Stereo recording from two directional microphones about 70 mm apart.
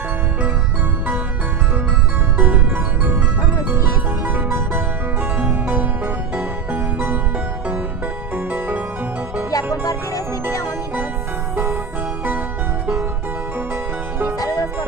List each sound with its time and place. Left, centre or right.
2.4 s music: right
4.4 s music: right
5.6 s music: right
8.4 s music: right
9.9 s music: left